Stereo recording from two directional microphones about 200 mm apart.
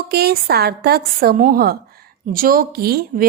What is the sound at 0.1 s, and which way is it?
Speech, 50° right (ahead or behind).